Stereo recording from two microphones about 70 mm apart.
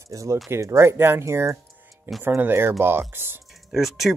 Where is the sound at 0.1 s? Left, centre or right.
Right.